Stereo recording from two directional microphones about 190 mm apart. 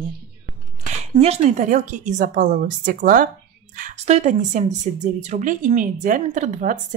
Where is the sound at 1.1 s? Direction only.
35° right (ahead or behind).